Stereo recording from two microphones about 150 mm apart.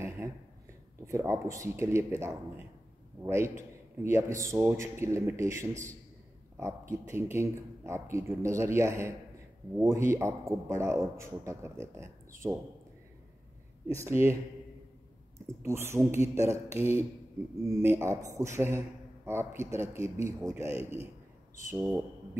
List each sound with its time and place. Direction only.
0.2 s a sound: 20° right (ahead or behind)
1.0 s a man's voice: 20° right (ahead or behind)
14.2 s speech: 45° left (ahead or behind)
15.6 s a man's voice: 15° right (ahead or behind)
20.9 s a man's voice: 45° right (ahead or behind)
21.6 s a man's voice: 15° right (ahead or behind)